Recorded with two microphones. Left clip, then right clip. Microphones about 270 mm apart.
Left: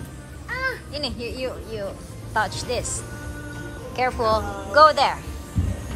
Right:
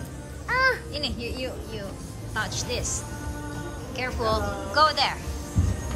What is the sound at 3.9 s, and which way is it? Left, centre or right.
Speech, centre.